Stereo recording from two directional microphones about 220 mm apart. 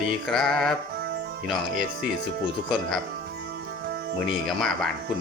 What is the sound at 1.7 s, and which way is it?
Speech, 40° right (ahead or behind).